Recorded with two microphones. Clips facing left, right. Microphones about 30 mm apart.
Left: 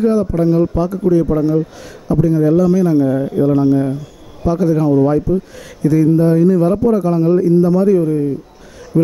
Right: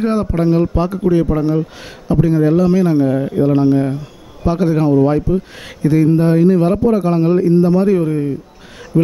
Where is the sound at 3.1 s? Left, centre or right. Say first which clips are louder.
Even; right.